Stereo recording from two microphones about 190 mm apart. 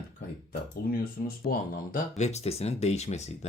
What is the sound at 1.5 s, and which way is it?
Speech, 50° left (ahead or behind).